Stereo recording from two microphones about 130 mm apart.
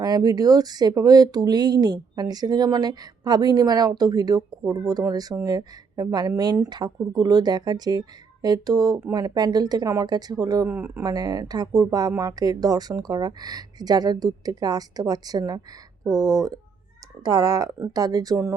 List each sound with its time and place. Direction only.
0.0 s speech: 30° right (ahead or behind)
10.8 s speech: 15° right (ahead or behind)
11.0 s speech: 30° right (ahead or behind)